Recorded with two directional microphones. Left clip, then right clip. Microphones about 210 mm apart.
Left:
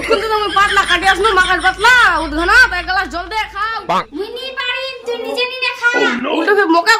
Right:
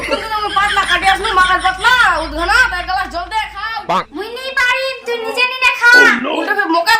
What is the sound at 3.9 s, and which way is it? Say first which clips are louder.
Speech: right 1 dB; centre (ahead or behind).